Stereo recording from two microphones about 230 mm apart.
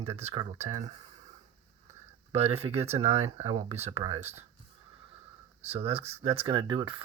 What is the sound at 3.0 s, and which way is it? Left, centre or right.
Speech, right.